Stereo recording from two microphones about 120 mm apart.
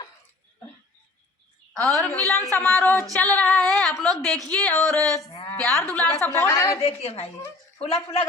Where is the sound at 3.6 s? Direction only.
Centre (ahead or behind).